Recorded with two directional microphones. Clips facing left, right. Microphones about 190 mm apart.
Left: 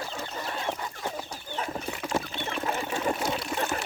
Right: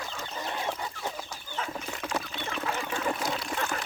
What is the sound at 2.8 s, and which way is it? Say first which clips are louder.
Water: left 3 dB; 25° left (ahead or behind).